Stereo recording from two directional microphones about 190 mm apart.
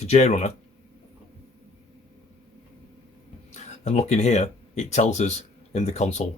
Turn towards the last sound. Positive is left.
turn(degrees=35)  # may be behind; listen again after turning